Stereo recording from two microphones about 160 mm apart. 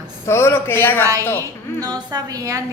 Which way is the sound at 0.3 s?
15° left (ahead or behind).